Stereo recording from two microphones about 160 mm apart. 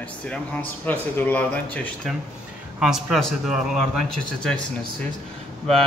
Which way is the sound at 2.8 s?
Centre (ahead or behind).